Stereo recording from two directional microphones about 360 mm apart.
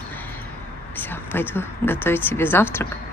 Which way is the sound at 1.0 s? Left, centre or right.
Centre.